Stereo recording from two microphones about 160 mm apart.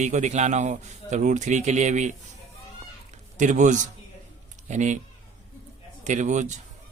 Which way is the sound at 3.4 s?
50° right (ahead or behind).